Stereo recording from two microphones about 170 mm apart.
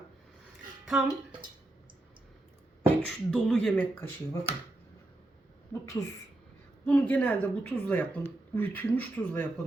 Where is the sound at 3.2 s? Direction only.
5° left (ahead or behind).